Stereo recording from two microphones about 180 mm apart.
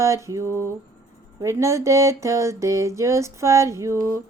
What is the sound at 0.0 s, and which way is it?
Speech, 15° right (ahead or behind).